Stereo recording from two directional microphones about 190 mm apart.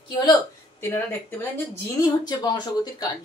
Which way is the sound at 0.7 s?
10° left (ahead or behind).